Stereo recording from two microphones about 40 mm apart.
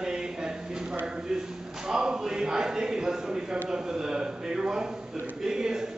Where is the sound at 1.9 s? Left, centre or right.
Centre.